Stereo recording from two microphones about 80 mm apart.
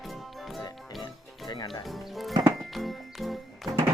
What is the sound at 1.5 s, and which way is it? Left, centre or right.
Music, left.